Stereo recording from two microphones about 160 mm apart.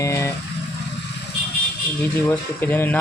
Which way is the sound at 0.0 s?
20° left (ahead or behind).